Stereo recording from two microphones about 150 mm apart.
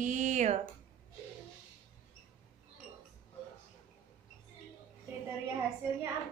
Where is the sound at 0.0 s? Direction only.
55° right (ahead or behind).